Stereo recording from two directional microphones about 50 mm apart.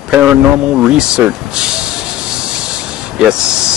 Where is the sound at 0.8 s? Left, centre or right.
Centre.